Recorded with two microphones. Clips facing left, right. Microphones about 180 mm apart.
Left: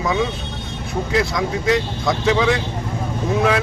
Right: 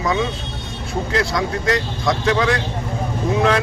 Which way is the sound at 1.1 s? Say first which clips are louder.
Left 1 dB; 5° left (ahead or behind).